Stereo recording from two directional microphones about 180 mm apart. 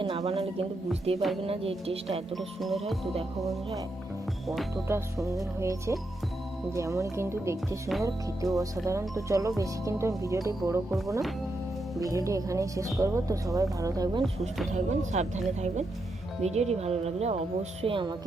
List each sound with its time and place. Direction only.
0.0 s music: 30° right (ahead or behind)
1.1 s speech: 35° right (ahead or behind)
2.3 s speech: centre (ahead or behind)
4.9 s speech: 15° right (ahead or behind)
11.9 s speech: 20° right (ahead or behind)
14.7 s speech: 40° right (ahead or behind)